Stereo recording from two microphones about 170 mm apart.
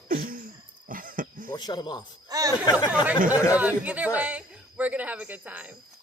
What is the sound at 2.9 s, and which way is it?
Speech, 5° right (ahead or behind).